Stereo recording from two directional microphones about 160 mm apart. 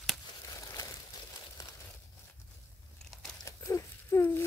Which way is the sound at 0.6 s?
20° left (ahead or behind).